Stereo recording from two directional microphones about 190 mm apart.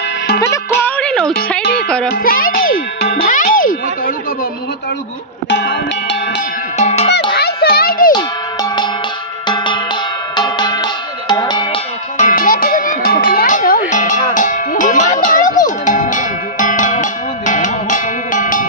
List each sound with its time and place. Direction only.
0.4 s music: 15° left (ahead or behind)
2.2 s a child's voice: 50° left (ahead or behind)
3.3 s music: 45° left (ahead or behind)
5.5 s music: 65° left (ahead or behind)
6.8 s music: 35° left (ahead or behind)
7.1 s children playing: 60° left (ahead or behind)
8.1 s cowbell: 20° left (ahead or behind)
10.3 s music: 25° left (ahead or behind)
12.2 s music: 45° left (ahead or behind)